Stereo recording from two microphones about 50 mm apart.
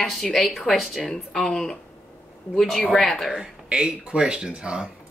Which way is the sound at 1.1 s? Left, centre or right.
Centre.